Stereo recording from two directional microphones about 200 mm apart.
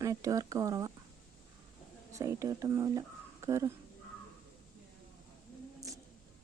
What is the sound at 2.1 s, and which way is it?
Speech, 15° right (ahead or behind).